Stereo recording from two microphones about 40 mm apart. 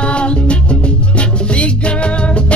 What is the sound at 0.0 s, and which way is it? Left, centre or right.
Music, left.